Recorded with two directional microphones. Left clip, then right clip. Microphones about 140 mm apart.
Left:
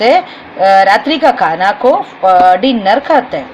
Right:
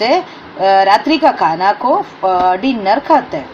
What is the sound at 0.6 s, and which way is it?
A woman's voice, 35° left (ahead or behind).